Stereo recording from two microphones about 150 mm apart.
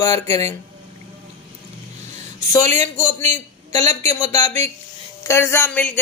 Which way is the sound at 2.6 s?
50° right (ahead or behind).